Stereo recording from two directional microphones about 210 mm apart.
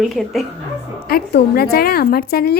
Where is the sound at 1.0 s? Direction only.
45° left (ahead or behind).